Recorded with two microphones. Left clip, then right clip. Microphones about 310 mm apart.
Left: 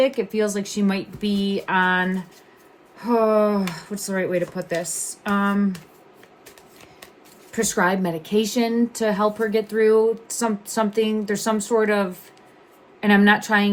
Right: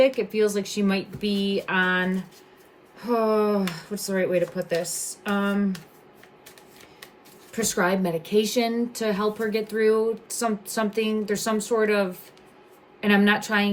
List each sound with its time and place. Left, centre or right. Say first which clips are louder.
0.2 s speech: even; centre
7.5 s speech: left 3 dB; left